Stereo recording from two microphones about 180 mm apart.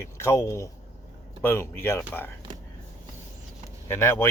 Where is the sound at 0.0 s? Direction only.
15° left (ahead or behind).